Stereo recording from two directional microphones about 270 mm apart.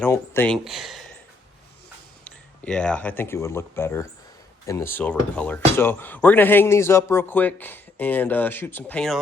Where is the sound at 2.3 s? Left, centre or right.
Centre.